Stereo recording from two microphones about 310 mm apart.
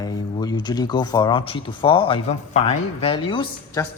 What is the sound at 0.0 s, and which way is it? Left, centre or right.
Speech, centre.